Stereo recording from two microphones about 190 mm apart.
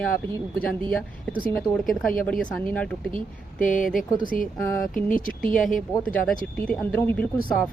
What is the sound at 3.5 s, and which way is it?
Speech, 45° left (ahead or behind).